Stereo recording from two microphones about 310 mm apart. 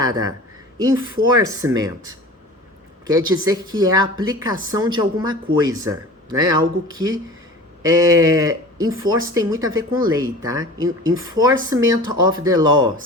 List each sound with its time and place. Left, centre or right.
0.0 s speech: centre